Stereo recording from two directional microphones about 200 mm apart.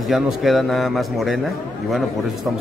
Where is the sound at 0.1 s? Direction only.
Centre (ahead or behind).